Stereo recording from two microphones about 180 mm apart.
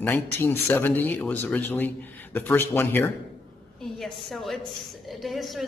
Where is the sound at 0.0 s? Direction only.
10° left (ahead or behind).